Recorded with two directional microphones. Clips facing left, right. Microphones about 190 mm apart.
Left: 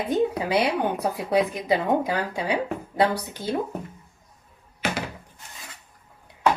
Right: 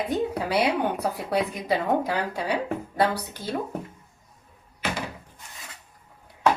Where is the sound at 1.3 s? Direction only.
15° left (ahead or behind).